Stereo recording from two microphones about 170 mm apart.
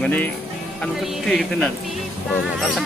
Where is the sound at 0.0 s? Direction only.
10° left (ahead or behind).